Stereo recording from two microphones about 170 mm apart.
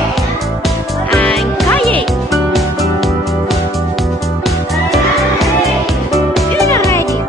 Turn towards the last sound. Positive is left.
turn(degrees=15)  # may be behind; listen again after turning